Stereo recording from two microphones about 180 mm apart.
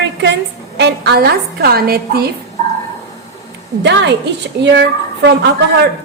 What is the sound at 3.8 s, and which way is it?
A woman's voice, 75° right (ahead or behind).